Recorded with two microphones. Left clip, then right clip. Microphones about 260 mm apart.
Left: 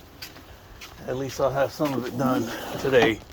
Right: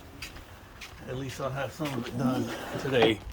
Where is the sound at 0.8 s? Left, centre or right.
Centre.